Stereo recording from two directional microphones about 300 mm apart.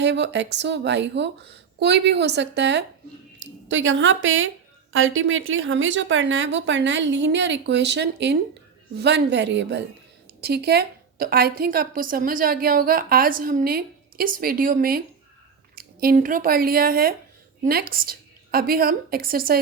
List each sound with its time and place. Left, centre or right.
0.0 s a woman's voice: right